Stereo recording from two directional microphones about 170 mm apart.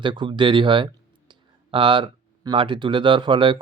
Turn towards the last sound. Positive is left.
turn(degrees=-30)  # may be behind; listen again after turning